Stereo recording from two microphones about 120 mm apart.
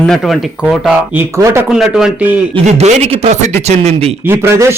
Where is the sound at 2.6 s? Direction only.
75° right (ahead or behind).